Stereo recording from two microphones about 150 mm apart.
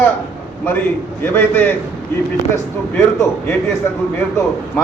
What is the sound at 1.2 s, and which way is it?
Speech, 15° left (ahead or behind).